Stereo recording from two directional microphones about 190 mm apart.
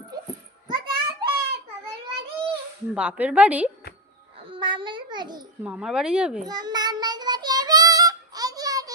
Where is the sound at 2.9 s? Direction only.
5° right (ahead or behind).